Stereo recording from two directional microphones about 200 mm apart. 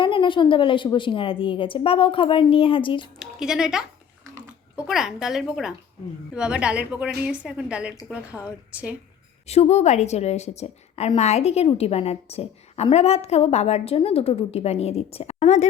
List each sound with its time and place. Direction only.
0.0 s a woman's voice: 25° left (ahead or behind)
3.2 s speech: 5° right (ahead or behind)
4.9 s a woman's voice: centre (ahead or behind)
9.5 s a woman's voice: 35° left (ahead or behind)